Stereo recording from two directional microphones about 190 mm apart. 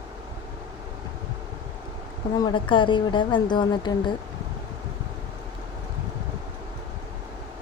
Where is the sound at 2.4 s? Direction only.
25° left (ahead or behind).